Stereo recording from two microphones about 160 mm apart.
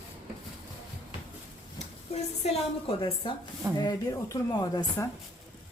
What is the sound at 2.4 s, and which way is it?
A woman's voice, 35° left (ahead or behind).